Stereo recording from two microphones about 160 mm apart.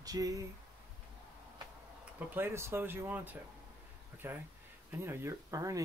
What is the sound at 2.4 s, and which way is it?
Speech, 15° right (ahead or behind).